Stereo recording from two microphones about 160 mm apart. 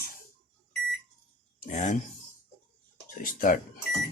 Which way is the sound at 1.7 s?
50° left (ahead or behind).